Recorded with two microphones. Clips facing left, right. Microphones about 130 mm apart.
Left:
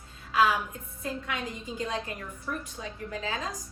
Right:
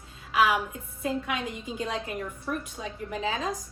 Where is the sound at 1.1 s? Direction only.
20° right (ahead or behind).